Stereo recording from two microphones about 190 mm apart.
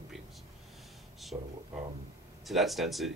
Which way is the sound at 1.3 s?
20° right (ahead or behind).